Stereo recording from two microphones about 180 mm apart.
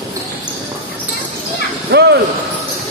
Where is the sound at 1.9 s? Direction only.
65° right (ahead or behind).